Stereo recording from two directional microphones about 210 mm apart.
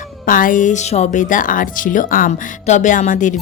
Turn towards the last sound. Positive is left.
turn(degrees=35)  # may be behind; listen again after turning